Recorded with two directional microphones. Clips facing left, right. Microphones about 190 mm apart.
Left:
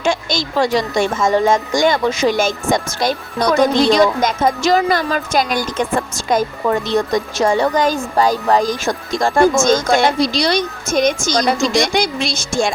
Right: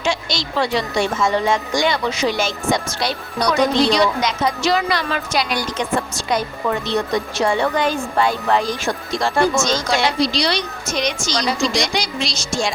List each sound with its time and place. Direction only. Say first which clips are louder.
0.0 s speech: left 4 dB; 50° left (ahead or behind)